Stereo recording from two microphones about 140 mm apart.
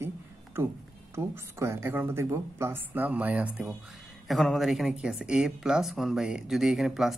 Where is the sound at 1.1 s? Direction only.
20° right (ahead or behind).